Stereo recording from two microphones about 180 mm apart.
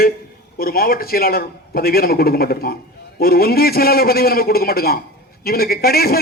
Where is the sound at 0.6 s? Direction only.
55° left (ahead or behind).